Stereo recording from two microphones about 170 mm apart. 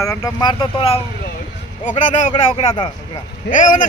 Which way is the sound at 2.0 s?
45° left (ahead or behind).